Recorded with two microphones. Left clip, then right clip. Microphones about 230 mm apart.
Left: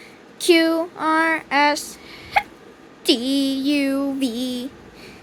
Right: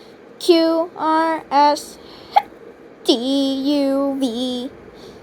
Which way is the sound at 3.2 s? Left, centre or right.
Left.